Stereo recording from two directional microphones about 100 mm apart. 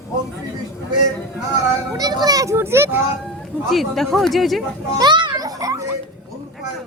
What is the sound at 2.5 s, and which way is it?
Speech, 25° right (ahead or behind).